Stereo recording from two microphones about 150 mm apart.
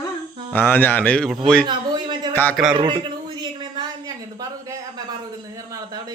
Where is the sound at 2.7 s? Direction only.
35° right (ahead or behind).